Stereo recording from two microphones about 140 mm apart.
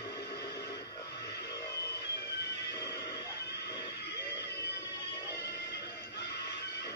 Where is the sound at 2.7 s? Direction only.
25° left (ahead or behind).